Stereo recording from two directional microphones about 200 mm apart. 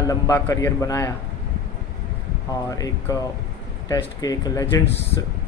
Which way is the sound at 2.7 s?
15° left (ahead or behind).